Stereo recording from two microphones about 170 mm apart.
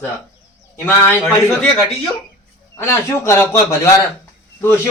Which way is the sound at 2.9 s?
15° left (ahead or behind).